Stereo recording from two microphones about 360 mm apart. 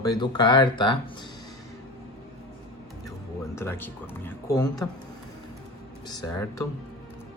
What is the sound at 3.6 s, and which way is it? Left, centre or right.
Speech, centre.